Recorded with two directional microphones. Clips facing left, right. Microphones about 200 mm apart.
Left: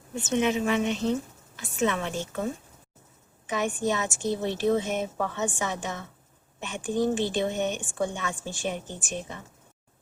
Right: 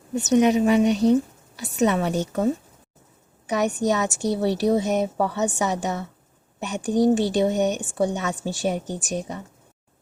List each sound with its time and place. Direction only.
0.1 s a woman's voice: 40° right (ahead or behind)
3.5 s a woman's voice: 40° right (ahead or behind)